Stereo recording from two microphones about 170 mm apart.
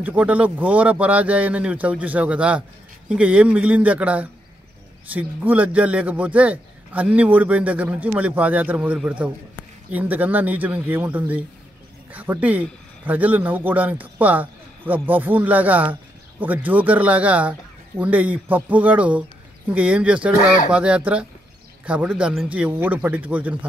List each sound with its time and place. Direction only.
0.0 s a man's voice: 10° right (ahead or behind)
20.3 s speech: 50° left (ahead or behind)
20.7 s a man's voice: 5° right (ahead or behind)